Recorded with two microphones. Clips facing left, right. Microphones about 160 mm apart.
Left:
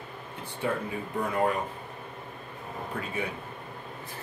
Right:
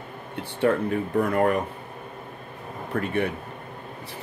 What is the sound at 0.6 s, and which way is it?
Speech, 70° right (ahead or behind).